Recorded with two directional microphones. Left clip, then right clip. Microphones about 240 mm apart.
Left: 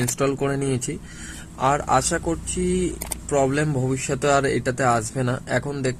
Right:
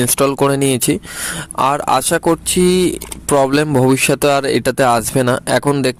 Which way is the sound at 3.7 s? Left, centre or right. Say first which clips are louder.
Right 13 dB; right.